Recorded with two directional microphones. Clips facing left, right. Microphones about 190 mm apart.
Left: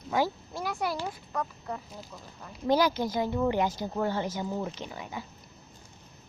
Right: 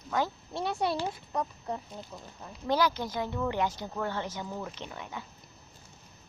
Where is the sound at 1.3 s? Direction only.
20° right (ahead or behind).